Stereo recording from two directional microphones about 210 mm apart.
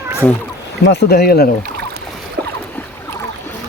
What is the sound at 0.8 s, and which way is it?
Speech, 50° left (ahead or behind).